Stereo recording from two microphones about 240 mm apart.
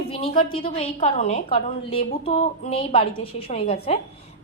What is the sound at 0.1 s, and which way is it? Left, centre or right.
A woman's voice, left.